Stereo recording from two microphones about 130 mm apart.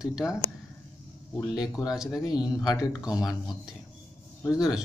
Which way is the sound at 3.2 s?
5° right (ahead or behind).